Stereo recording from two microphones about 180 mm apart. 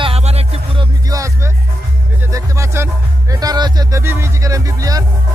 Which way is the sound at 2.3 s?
15° right (ahead or behind).